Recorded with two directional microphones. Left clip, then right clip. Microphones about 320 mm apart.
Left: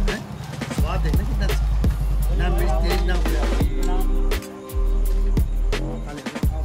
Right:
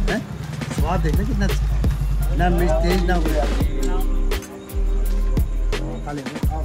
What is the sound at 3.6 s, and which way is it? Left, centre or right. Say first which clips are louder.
Music: right 1 dB; centre.